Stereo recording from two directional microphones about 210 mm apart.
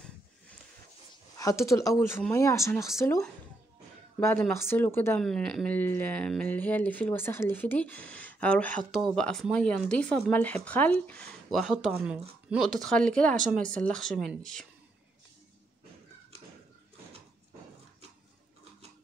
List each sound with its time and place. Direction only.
1.3 s speech: 15° left (ahead or behind)
4.2 s speech: 10° left (ahead or behind)